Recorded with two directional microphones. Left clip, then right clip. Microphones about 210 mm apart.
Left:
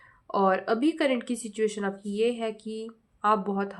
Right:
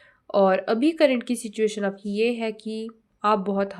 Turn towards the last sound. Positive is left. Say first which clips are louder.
# right 3 dB
turn(degrees=-20)  # may be behind; listen again after turning